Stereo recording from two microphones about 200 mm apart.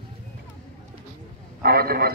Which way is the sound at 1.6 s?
50° right (ahead or behind).